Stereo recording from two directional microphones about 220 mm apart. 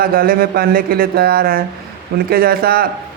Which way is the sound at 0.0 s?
40° right (ahead or behind).